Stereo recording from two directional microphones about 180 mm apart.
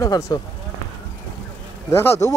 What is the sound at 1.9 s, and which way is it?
Speech, 15° left (ahead or behind).